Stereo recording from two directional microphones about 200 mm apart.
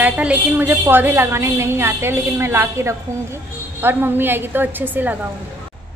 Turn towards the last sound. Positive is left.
turn(degrees=-10)  # may be behind; listen again after turning